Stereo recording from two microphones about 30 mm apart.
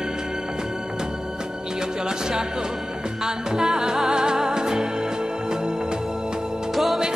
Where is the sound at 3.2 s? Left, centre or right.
Right.